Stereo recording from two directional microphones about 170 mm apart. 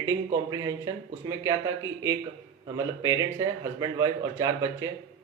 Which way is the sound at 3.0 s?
20° right (ahead or behind).